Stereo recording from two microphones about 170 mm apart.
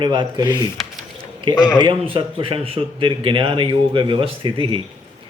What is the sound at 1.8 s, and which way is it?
A man's voice, 30° right (ahead or behind).